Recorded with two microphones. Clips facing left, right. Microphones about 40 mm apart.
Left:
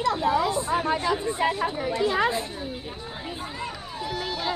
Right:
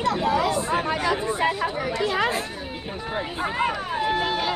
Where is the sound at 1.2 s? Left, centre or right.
Right.